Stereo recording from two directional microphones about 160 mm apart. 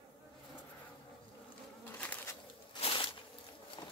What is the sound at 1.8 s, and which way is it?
Bee, 10° left (ahead or behind).